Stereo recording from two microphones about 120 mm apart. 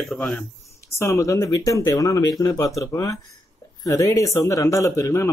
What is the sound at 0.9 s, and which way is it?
Speech, 25° left (ahead or behind).